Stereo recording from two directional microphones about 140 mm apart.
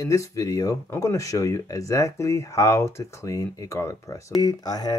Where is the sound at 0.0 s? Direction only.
25° left (ahead or behind).